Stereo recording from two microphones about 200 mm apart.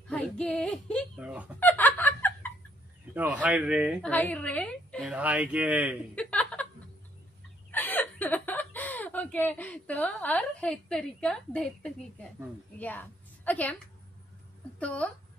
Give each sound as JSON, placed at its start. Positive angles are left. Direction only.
{"t": 0.1, "sound": "a woman's voice", "side_deg": 5}
{"t": 1.6, "sound": "giggle", "side_deg": 10}
{"t": 3.4, "sound": "speech", "side_deg": -5}
{"t": 4.1, "sound": "a woman's voice", "side_deg": 5}
{"t": 5.1, "sound": "speech", "side_deg": -5}
{"t": 6.1, "sound": "a sound", "side_deg": 5}
{"t": 7.7, "sound": "a woman's voice", "side_deg": 10}
{"t": 14.8, "sound": "speech", "side_deg": 5}